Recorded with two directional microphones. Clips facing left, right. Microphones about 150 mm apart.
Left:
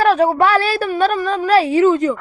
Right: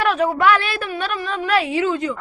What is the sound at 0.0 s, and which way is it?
A woman's voice, 35° left (ahead or behind).